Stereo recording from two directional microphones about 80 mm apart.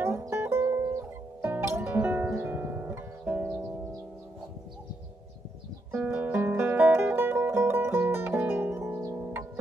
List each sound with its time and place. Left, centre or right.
0.4 s music: right
5.9 s music: right